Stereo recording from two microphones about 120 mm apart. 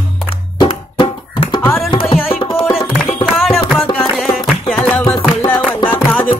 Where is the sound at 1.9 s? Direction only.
50° left (ahead or behind).